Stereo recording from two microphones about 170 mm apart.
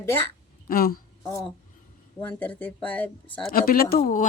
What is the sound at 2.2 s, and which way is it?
Speech, 10° left (ahead or behind).